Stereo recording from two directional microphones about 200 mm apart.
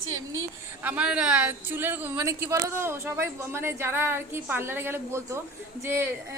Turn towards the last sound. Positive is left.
turn(degrees=-10)  # may be behind; listen again after turning